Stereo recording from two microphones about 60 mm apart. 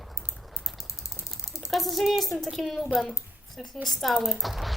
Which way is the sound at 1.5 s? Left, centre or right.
Left.